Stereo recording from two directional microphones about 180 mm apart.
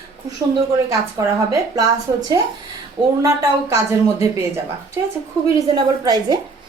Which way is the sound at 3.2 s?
15° right (ahead or behind).